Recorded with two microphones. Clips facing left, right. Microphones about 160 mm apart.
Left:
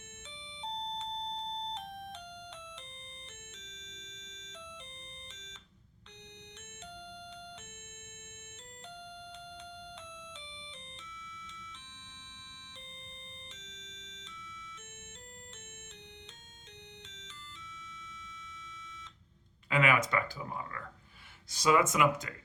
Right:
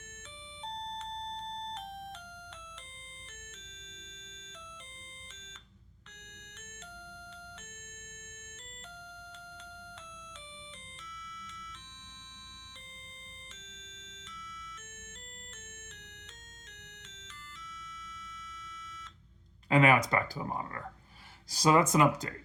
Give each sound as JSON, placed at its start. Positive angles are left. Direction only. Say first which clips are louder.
{"t": 19.7, "sound": "speech", "louder": "right 4 dB", "side_deg": -40}